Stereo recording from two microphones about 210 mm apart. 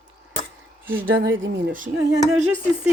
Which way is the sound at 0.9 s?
10° right (ahead or behind).